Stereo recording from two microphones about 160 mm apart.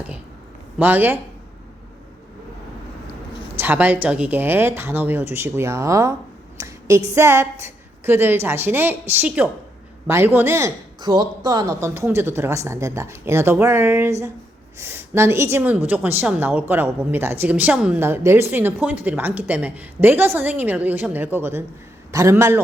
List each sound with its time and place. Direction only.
0.8 s a woman's voice: 10° right (ahead or behind)
3.6 s a woman's voice: 10° right (ahead or behind)